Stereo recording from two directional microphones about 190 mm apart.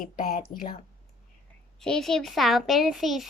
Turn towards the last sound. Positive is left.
turn(degrees=0)  # may be behind; listen again after turning